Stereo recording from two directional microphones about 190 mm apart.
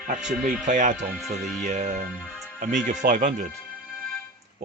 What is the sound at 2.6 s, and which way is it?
Speech, 40° right (ahead or behind).